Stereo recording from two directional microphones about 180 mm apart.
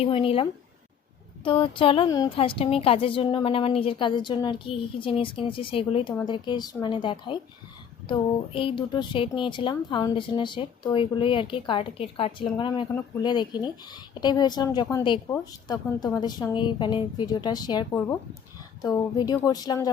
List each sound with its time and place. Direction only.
0.0 s speech: 30° left (ahead or behind)
1.5 s a woman's voice: 30° left (ahead or behind)
18.9 s a woman's voice: 20° left (ahead or behind)